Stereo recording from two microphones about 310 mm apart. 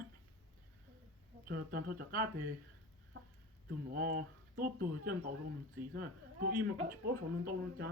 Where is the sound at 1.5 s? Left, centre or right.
Right.